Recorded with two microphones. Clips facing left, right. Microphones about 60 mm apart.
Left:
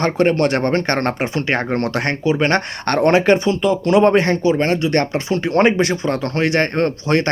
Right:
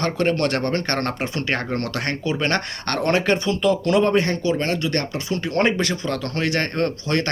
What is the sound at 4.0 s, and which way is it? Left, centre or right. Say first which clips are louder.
Speech: left 5 dB; left.